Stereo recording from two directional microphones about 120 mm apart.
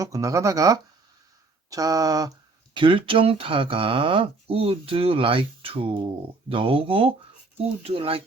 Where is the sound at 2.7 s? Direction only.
45° right (ahead or behind).